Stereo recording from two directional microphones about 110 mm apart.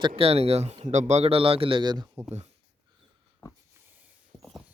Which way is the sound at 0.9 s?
90° right.